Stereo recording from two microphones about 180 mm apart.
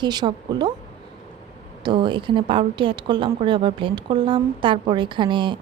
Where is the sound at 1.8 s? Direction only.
25° right (ahead or behind).